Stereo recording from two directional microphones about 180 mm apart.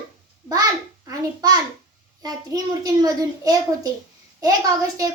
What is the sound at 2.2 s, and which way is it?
A child's voice, 20° right (ahead or behind).